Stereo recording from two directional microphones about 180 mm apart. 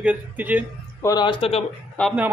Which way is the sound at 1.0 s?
25° left (ahead or behind).